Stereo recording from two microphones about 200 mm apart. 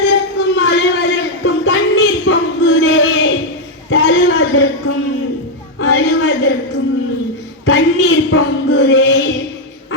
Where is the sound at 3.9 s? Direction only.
90° left.